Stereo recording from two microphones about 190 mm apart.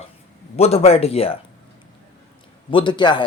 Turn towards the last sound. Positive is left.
turn(degrees=25)  # may be behind; listen again after turning